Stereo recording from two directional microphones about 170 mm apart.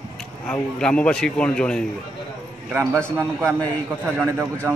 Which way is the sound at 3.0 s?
15° right (ahead or behind).